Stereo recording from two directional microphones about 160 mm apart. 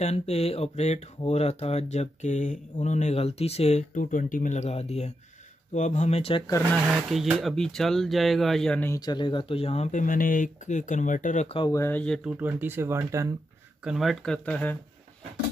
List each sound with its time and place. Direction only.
0.0 s speech: 40° left (ahead or behind)
6.9 s speech: centre (ahead or behind)
8.9 s speech: 25° left (ahead or behind); by 11.4 s 55° left (ahead or behind)
11.4 s speech: 35° left (ahead or behind)
11.7 s speech: 15° left (ahead or behind)
12.3 s speech: 10° right (ahead or behind)
13.8 s speech: centre (ahead or behind)